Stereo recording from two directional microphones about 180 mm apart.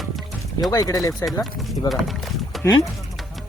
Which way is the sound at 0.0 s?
Centre (ahead or behind).